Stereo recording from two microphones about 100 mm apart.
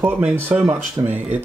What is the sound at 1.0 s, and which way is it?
Speech, 40° right (ahead or behind).